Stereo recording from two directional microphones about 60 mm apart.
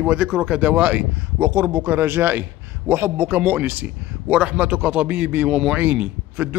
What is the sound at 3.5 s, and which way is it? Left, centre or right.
A man's voice, right.